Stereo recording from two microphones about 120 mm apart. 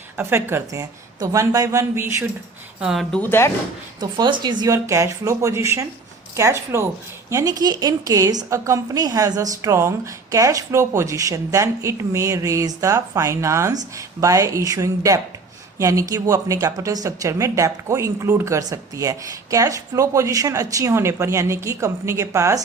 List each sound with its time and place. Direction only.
0.2 s speech: 20° right (ahead or behind)
2.8 s speech: centre (ahead or behind)
3.2 s speech: 20° left (ahead or behind)
4.0 s a woman's voice: 35° right (ahead or behind)
4.6 s a woman's voice: 25° right (ahead or behind)